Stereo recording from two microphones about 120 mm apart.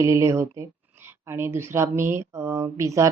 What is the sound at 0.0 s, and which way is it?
Speech, 25° right (ahead or behind).